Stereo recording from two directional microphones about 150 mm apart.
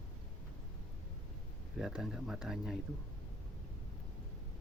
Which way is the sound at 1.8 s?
5° right (ahead or behind).